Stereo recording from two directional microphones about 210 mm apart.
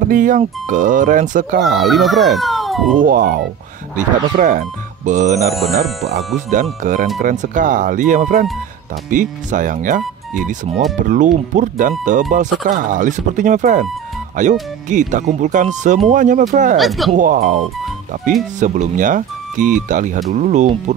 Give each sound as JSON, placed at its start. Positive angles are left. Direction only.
{"t": 0.1, "sound": "speech", "side_deg": -40}
{"t": 1.8, "sound": "a child's voice", "side_deg": 0}
{"t": 3.0, "sound": "speech", "side_deg": -45}
{"t": 5.5, "sound": "speech", "side_deg": 0}
{"t": 6.0, "sound": "speech", "side_deg": -35}
{"t": 16.7, "sound": "speech", "side_deg": 0}
{"t": 17.2, "sound": "speech", "side_deg": -40}